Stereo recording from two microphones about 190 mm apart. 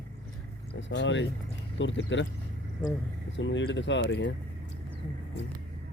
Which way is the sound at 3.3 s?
75° left (ahead or behind).